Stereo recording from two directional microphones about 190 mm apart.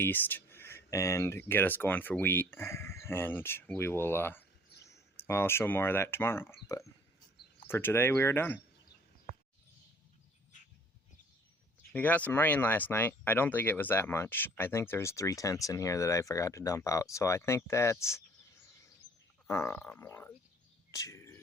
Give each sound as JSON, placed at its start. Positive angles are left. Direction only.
{"t": 0.0, "sound": "speech", "side_deg": 10}
{"t": 11.9, "sound": "speech", "side_deg": 10}
{"t": 19.5, "sound": "speech", "side_deg": 15}
{"t": 20.9, "sound": "bird", "side_deg": 15}